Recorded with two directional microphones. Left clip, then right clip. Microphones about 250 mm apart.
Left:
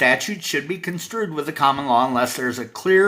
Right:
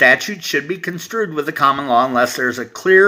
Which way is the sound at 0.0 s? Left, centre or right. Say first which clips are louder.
Right 6 dB; centre.